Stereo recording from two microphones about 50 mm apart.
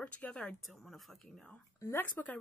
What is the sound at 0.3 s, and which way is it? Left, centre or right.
Speech, centre.